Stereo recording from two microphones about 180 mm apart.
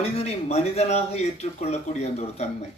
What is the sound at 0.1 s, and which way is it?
Speech, 35° left (ahead or behind).